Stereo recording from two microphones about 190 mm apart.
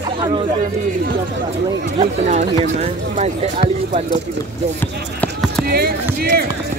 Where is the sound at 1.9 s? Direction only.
35° right (ahead or behind).